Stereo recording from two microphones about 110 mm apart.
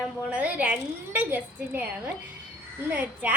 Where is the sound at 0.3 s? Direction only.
15° right (ahead or behind).